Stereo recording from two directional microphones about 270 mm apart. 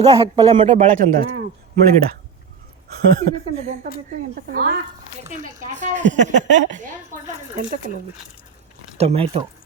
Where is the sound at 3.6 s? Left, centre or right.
Right.